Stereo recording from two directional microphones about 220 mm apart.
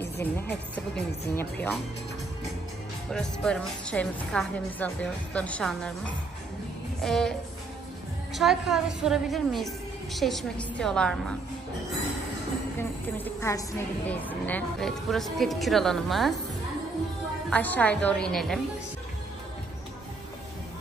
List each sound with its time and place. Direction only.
0.0 s speech: 10° left (ahead or behind)
3.1 s a woman's voice: 5° left (ahead or behind)
7.0 s a woman's voice: centre (ahead or behind)
12.7 s a woman's voice: 10° left (ahead or behind)
17.5 s a woman's voice: 5° left (ahead or behind)